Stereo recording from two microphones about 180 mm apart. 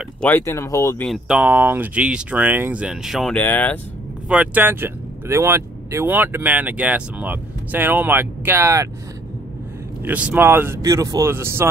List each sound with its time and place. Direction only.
0.2 s speech: 15° left (ahead or behind)
1.0 s speech: 5° right (ahead or behind)
4.3 s speech: 10° right (ahead or behind)
10.0 s speech: 10° right (ahead or behind)